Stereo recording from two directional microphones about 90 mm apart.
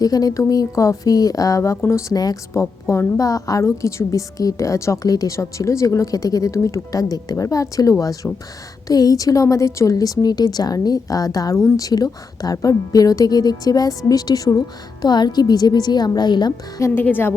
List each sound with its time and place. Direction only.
0.0 s a woman's voice: 45° left (ahead or behind)
16.8 s a woman's voice: 25° left (ahead or behind)